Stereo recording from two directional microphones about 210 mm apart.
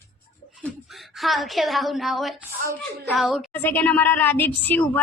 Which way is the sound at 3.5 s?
10° left (ahead or behind).